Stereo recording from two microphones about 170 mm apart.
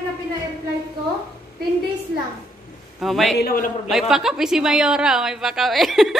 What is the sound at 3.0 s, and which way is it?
Speech, centre (ahead or behind).